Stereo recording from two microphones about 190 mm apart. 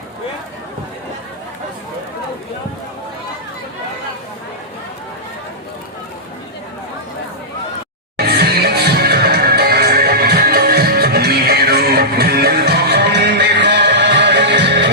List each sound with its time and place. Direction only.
8.2 s music: 55° right (ahead or behind)